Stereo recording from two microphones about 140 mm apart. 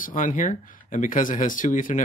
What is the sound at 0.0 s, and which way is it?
Speech, 70° left (ahead or behind).